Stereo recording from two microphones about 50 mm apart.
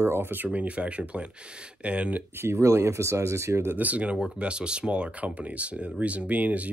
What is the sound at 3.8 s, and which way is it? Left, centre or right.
Speech, right.